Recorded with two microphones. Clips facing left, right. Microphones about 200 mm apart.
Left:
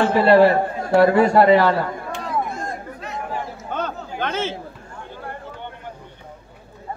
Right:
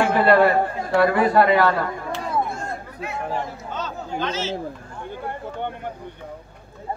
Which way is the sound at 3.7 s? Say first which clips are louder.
Left 2 dB; 55° left (ahead or behind).